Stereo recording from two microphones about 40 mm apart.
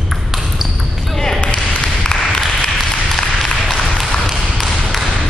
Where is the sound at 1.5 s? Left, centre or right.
Left.